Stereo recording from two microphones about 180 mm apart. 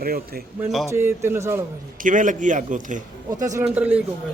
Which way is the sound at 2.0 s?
45° right (ahead or behind).